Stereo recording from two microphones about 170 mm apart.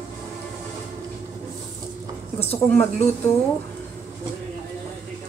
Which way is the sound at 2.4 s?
10° left (ahead or behind).